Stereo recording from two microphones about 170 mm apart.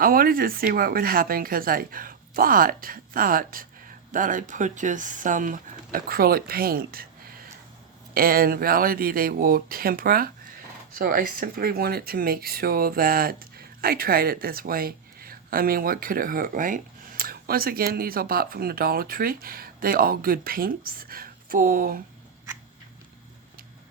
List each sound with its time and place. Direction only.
0.0 s speech: 60° right (ahead or behind)